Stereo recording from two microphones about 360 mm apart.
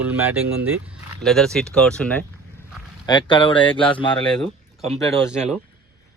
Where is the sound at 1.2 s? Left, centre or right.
Centre.